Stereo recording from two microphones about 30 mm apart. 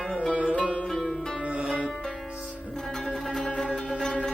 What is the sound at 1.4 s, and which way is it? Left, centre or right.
Music, right.